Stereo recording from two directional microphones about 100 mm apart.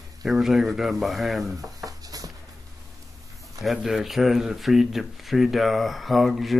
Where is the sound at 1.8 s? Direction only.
35° right (ahead or behind).